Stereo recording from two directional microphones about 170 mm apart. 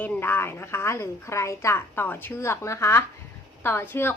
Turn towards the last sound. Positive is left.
turn(degrees=15)  # may be behind; listen again after turning